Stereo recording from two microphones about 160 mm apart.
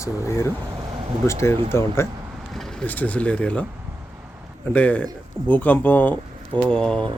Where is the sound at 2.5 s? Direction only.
5° left (ahead or behind).